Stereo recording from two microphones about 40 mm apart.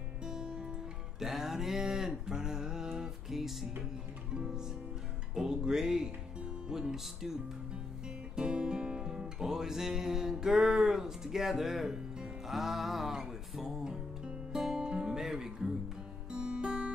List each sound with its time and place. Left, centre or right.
0.2 s music: centre
1.2 s a sound: centre
4.3 s music: centre
8.4 s music: right
16.3 s guitar: centre